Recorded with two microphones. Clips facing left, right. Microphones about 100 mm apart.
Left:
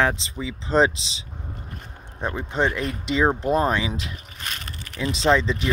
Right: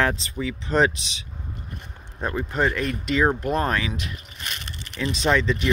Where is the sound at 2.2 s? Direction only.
20° left (ahead or behind).